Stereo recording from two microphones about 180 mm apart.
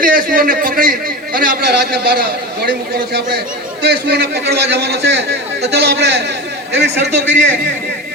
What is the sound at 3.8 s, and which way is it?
A man's voice, 65° right (ahead or behind).